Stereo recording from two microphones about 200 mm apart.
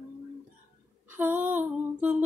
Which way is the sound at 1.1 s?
10° right (ahead or behind).